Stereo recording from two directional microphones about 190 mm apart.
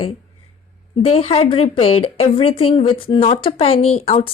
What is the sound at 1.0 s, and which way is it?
A woman's voice, 30° left (ahead or behind).